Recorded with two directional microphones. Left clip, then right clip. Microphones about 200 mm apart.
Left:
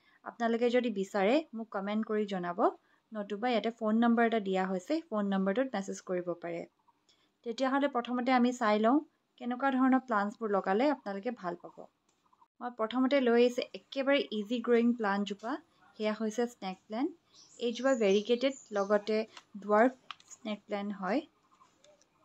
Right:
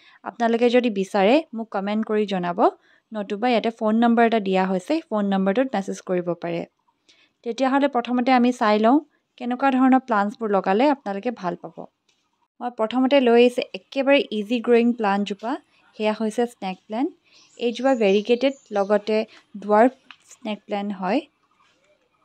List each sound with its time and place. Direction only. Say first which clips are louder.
0.0 s speech: right 11 dB; 45° right (ahead or behind)